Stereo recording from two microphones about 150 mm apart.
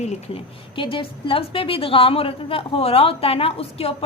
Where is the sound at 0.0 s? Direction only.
50° left (ahead or behind).